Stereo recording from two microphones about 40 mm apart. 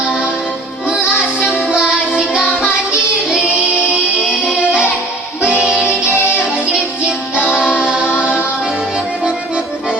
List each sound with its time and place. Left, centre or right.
1.5 s music: centre
4.5 s music: right
7.3 s music: right